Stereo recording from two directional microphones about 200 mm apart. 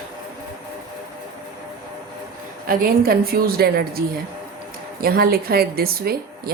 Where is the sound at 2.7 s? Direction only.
50° right (ahead or behind).